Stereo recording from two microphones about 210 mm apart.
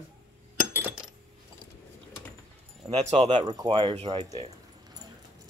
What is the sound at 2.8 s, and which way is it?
Speech, 30° right (ahead or behind).